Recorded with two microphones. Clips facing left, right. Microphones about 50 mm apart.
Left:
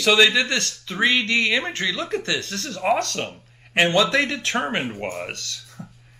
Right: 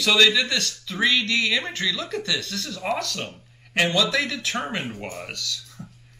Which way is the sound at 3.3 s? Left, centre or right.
Left.